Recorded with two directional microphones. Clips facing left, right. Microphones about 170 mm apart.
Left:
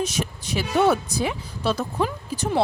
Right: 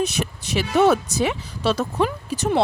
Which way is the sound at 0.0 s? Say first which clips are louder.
Right 2 dB; 65° right (ahead or behind).